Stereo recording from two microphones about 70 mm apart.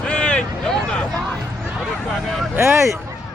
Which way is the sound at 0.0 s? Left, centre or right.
Centre.